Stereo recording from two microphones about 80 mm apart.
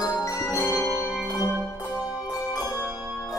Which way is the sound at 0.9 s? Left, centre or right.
Centre.